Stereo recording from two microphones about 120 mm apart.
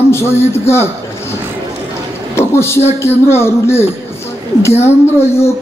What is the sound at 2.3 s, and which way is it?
A man's voice, 20° left (ahead or behind).